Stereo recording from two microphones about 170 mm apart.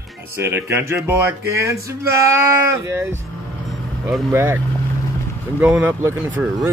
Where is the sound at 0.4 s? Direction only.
15° right (ahead or behind).